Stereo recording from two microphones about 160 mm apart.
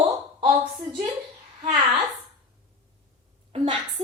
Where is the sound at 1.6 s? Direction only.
40° right (ahead or behind).